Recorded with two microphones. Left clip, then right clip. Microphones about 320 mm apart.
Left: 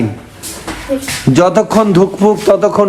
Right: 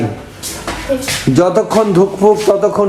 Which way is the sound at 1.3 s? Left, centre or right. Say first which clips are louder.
Left 2 dB; left.